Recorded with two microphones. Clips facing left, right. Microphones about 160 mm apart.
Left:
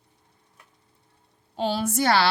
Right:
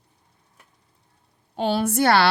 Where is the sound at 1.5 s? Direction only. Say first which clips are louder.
Right 3 dB; 60° right (ahead or behind).